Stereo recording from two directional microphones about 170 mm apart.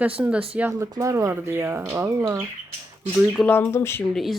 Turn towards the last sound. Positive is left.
turn(degrees=0)  # may be behind; listen again after turning